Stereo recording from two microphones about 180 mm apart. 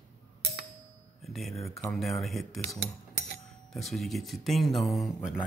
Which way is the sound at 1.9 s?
Centre (ahead or behind).